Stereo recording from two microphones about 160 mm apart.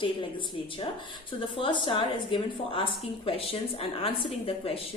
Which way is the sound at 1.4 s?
30° left (ahead or behind).